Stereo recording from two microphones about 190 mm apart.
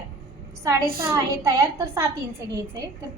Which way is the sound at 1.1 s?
15° right (ahead or behind).